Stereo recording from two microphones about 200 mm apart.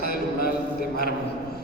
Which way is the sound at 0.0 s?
50° left (ahead or behind).